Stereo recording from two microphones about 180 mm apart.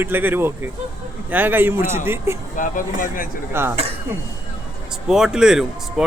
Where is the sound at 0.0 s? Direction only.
10° right (ahead or behind).